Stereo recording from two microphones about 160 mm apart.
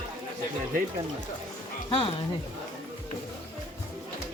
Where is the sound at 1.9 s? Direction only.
35° left (ahead or behind).